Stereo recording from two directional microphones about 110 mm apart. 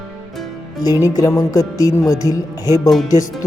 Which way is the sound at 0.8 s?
35° left (ahead or behind).